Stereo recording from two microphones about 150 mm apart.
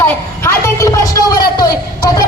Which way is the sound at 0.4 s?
20° left (ahead or behind).